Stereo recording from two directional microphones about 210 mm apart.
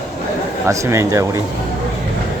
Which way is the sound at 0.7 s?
15° right (ahead or behind).